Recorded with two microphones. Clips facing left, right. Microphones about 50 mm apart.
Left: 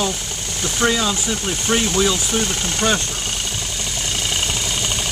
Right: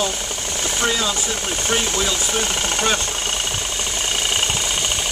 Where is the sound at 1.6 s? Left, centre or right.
Centre.